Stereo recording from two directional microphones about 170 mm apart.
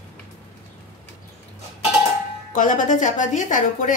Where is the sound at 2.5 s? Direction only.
50° left (ahead or behind).